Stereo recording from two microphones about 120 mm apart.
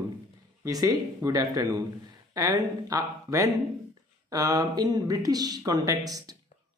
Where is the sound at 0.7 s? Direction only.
30° right (ahead or behind).